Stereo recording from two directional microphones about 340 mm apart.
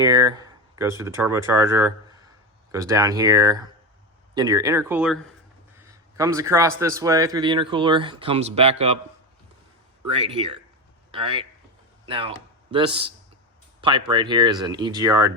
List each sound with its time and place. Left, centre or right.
0.0 s speech: centre
10.2 s speech: centre